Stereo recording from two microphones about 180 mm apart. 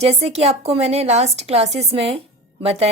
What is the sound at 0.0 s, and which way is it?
Speech, 35° right (ahead or behind).